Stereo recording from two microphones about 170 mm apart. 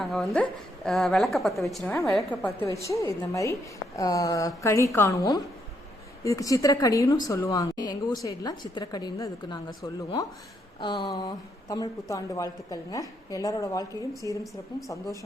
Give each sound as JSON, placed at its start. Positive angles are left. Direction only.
{"t": 0.0, "sound": "a woman's voice", "side_deg": 0}